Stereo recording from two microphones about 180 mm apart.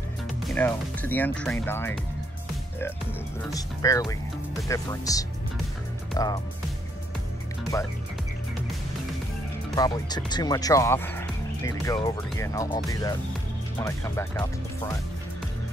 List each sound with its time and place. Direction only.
0.6 s speech: 10° left (ahead or behind)
3.5 s speech: 20° left (ahead or behind)
7.7 s speech: 20° left (ahead or behind)
9.8 s speech: 20° left (ahead or behind)